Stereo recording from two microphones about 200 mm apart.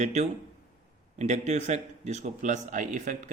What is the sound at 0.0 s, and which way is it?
Speech, 35° right (ahead or behind).